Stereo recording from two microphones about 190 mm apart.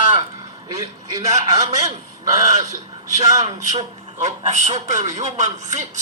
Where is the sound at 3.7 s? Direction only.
35° right (ahead or behind).